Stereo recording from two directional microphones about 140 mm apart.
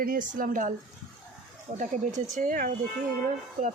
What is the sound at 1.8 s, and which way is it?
Speech, 60° right (ahead or behind).